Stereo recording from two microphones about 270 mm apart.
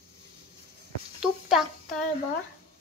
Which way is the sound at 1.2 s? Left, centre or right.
Centre.